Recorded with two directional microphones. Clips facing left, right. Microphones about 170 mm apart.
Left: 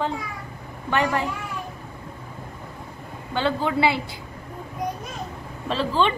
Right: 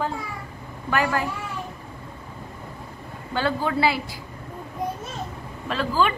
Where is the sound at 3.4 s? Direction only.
20° left (ahead or behind).